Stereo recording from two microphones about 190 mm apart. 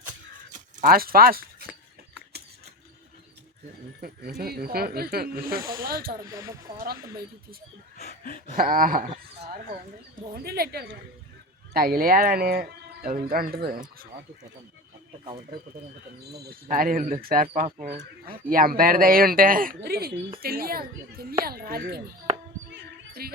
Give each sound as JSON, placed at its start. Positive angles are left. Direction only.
{"t": 0.5, "sound": "speech", "side_deg": -45}
{"t": 4.4, "sound": "speech", "side_deg": -55}
{"t": 6.3, "sound": "speech", "side_deg": -15}
{"t": 7.9, "sound": "a sound", "side_deg": 40}
{"t": 8.5, "sound": "speech", "side_deg": -45}
{"t": 16.3, "sound": "speech", "side_deg": -50}
{"t": 22.7, "sound": "a sound", "side_deg": -55}